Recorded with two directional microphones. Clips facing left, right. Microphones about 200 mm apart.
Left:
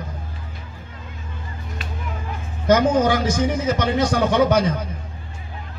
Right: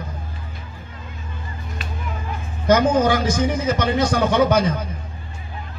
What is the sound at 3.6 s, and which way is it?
A man's voice, 20° left (ahead or behind).